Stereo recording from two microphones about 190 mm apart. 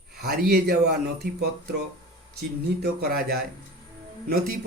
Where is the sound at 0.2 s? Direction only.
55° right (ahead or behind).